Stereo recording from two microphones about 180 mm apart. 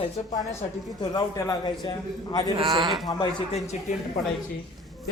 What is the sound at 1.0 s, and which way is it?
Speech, 20° left (ahead or behind).